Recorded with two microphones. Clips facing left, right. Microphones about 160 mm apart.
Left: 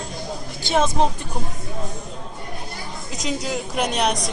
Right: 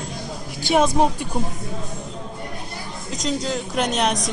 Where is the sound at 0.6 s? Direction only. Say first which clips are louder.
Right 2 dB; 10° right (ahead or behind).